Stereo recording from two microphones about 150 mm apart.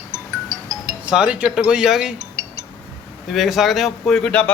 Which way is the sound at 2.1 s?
45° right (ahead or behind).